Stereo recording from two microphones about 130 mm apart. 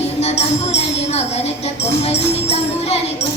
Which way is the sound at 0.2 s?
55° left (ahead or behind).